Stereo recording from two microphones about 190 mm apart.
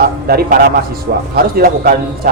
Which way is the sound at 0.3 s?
55° right (ahead or behind).